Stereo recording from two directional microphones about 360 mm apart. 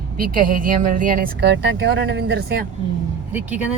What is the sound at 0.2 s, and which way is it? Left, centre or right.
Speech, right.